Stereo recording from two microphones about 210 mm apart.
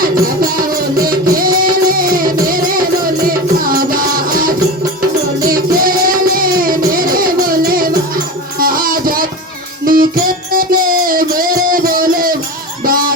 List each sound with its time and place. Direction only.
0.9 s music: 45° right (ahead or behind)